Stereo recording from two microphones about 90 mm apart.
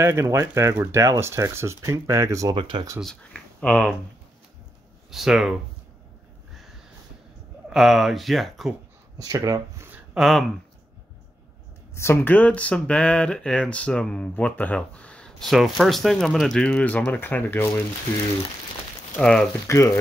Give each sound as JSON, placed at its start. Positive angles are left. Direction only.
{"t": 0.0, "sound": "speech", "side_deg": -30}
{"t": 2.5, "sound": "speech", "side_deg": -65}
{"t": 3.2, "sound": "speech", "side_deg": 15}
{"t": 5.1, "sound": "speech", "side_deg": -5}
{"t": 7.7, "sound": "speech", "side_deg": 0}
{"t": 9.2, "sound": "speech", "side_deg": -45}
{"t": 10.1, "sound": "speech", "side_deg": 0}
{"t": 11.9, "sound": "speech", "side_deg": 30}
{"t": 15.4, "sound": "speech", "side_deg": 0}
{"t": 19.1, "sound": "speech", "side_deg": 10}
{"t": 19.7, "sound": "speech", "side_deg": 35}